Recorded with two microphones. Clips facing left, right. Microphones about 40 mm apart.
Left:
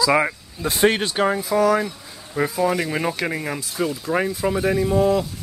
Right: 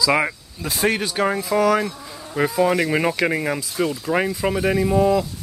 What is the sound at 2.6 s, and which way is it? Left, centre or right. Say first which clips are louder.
Speech: right 4 dB; right.